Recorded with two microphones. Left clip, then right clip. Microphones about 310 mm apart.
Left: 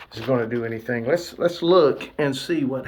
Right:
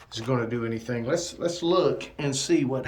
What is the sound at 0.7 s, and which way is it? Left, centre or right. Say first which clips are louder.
Speech: left 6 dB; centre.